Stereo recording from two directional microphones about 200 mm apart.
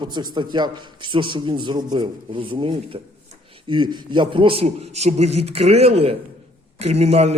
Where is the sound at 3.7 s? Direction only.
25° right (ahead or behind).